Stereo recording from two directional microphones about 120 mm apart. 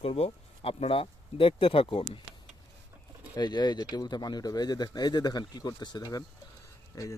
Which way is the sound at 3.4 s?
35° left (ahead or behind).